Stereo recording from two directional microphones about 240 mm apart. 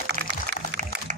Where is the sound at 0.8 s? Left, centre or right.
Right.